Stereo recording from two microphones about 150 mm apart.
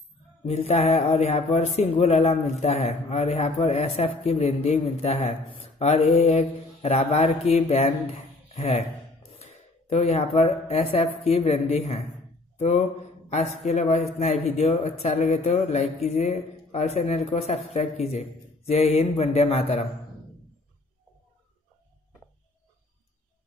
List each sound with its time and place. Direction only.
0.5 s a man's voice: 45° left (ahead or behind)